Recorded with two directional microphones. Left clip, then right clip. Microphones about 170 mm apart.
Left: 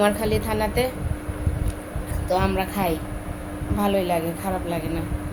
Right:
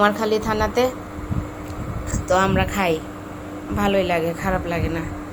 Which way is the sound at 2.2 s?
20° right (ahead or behind).